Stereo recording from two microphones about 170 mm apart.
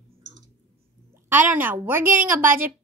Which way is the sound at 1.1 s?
10° right (ahead or behind).